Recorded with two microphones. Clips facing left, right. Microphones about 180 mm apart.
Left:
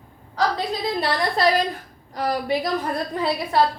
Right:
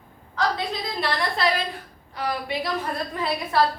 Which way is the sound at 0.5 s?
40° left (ahead or behind).